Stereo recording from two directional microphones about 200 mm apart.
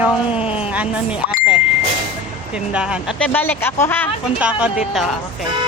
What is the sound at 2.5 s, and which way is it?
A woman's voice, 5° right (ahead or behind).